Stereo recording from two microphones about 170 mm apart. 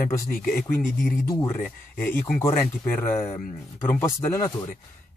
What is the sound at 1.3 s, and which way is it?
Speech, 20° left (ahead or behind).